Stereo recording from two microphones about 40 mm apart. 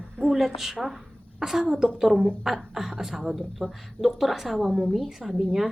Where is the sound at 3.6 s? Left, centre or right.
Centre.